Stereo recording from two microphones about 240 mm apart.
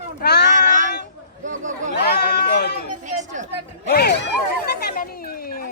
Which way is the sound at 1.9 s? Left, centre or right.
Left.